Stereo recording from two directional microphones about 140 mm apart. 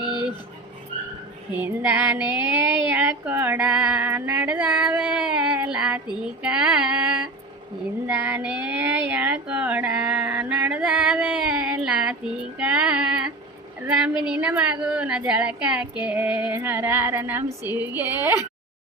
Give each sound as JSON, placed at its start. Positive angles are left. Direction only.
{"t": 1.5, "sound": "speech", "side_deg": -10}